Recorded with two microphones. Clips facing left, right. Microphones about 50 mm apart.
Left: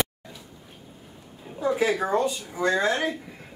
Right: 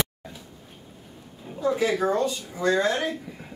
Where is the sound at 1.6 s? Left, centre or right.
Centre.